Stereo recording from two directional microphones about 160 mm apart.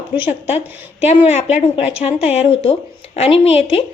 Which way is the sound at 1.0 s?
45° left (ahead or behind).